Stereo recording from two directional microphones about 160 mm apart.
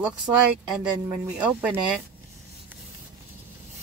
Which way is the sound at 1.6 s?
10° right (ahead or behind).